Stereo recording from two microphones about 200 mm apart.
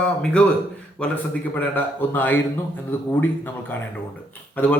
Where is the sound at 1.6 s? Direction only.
10° left (ahead or behind).